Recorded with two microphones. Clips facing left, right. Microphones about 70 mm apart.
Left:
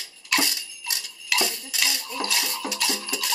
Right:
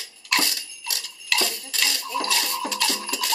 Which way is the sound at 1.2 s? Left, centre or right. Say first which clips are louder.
Even; centre.